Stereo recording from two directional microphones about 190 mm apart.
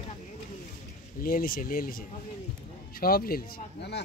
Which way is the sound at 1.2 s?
50° left (ahead or behind).